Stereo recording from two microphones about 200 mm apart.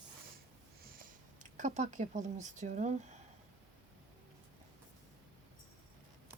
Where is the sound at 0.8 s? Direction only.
45° right (ahead or behind).